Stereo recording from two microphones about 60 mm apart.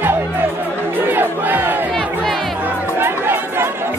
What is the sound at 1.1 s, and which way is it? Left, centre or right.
Crowd, right.